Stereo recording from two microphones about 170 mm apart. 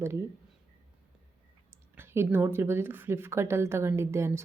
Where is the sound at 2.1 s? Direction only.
15° right (ahead or behind).